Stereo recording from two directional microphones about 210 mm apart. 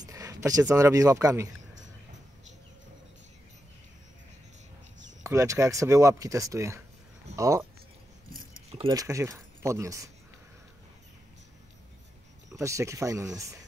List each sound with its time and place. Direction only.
0.0 s a sound: 15° right (ahead or behind)
0.7 s speech: 15° right (ahead or behind)
5.2 s speech: 15° right (ahead or behind)
8.7 s speech: 20° right (ahead or behind)
12.4 s speech: 15° right (ahead or behind)